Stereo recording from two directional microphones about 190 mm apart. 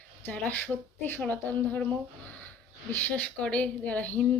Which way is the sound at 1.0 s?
10° left (ahead or behind).